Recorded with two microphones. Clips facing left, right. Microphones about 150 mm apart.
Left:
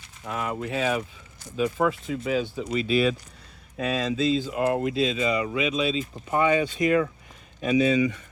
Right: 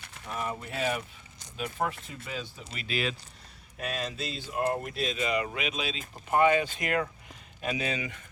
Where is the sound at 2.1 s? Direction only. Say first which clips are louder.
Left 13 dB; 90° left.